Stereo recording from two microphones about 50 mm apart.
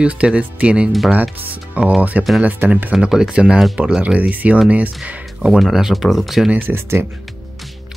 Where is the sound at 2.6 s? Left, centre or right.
Right.